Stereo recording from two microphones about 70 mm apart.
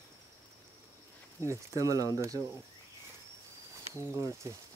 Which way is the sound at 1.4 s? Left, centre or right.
Right.